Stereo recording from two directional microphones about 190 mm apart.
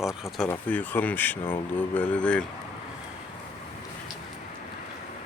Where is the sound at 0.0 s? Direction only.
Centre (ahead or behind).